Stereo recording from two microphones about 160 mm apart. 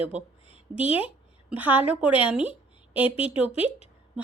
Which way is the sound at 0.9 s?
35° left (ahead or behind).